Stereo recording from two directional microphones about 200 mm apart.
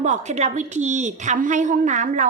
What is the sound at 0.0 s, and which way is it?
Speech, 35° right (ahead or behind).